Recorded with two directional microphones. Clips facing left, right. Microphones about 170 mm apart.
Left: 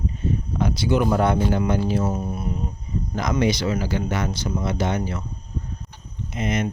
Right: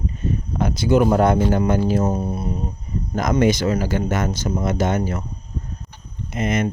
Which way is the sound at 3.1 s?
45° right (ahead or behind).